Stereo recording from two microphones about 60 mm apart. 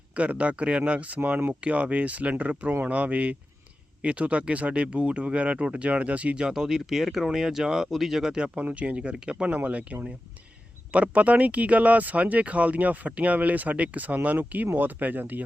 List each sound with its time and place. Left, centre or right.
0.1 s speech: right
6.5 s speech: centre
8.5 s speech: right
9.5 s speech: right